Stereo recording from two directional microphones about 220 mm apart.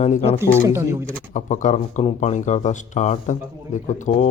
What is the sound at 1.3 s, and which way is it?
Speech, 35° left (ahead or behind).